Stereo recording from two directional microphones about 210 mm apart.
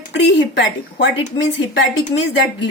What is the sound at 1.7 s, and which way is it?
Speech, 60° left (ahead or behind).